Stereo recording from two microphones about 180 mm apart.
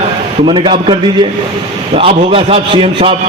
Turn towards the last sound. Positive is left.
turn(degrees=-30)  # may be behind; listen again after turning